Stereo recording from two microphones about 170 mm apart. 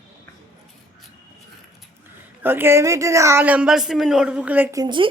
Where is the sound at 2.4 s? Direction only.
15° right (ahead or behind).